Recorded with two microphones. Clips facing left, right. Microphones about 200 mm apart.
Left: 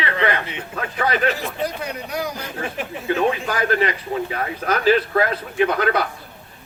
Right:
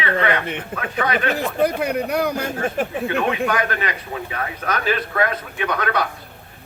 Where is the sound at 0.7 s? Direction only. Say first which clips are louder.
Left 1 dB; 55° right (ahead or behind).